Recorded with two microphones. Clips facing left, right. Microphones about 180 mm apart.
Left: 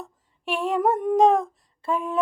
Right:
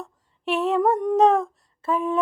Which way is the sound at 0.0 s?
10° left (ahead or behind).